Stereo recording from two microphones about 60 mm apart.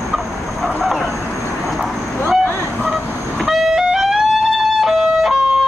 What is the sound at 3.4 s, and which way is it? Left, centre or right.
Music, centre.